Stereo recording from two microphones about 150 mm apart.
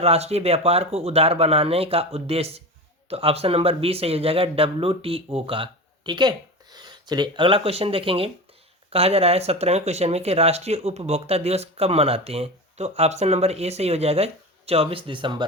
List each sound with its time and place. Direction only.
0.0 s speech: 45° right (ahead or behind)